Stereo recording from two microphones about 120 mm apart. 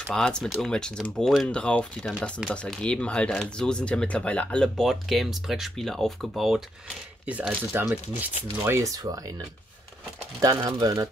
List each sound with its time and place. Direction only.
0.0 s speech: 5° left (ahead or behind)
7.2 s speech: 10° right (ahead or behind)
8.3 s speech: 55° left (ahead or behind)
8.6 s speech: 25° right (ahead or behind)
10.4 s speech: 30° right (ahead or behind)